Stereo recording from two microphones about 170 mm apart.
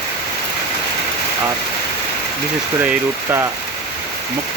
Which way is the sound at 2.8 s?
15° right (ahead or behind).